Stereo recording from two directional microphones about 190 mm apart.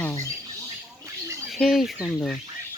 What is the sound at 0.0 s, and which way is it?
Rodents, 15° left (ahead or behind).